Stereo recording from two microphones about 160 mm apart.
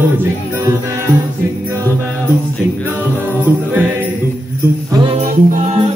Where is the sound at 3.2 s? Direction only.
10° right (ahead or behind).